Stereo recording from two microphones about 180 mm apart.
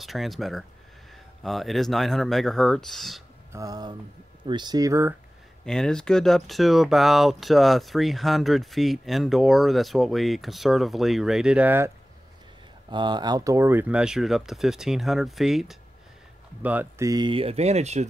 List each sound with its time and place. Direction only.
0.0 s speech: centre (ahead or behind)
3.5 s speech: 20° right (ahead or behind)
5.7 s speech: 5° left (ahead or behind)
12.9 s speech: 25° right (ahead or behind); by 17.1 s 10° right (ahead or behind)
17.1 s speech: 25° right (ahead or behind)